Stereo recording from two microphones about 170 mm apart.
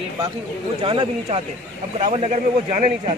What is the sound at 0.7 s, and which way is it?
A man's voice, 30° right (ahead or behind).